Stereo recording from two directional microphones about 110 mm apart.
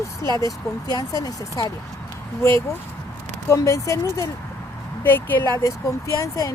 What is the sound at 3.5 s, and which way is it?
Speech, 30° left (ahead or behind).